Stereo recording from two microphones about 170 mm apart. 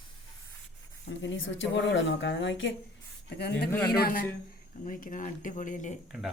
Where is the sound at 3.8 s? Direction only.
65° left (ahead or behind); by 5.9 s 50° left (ahead or behind).